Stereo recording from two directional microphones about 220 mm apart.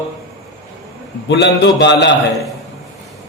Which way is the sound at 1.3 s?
50° left (ahead or behind).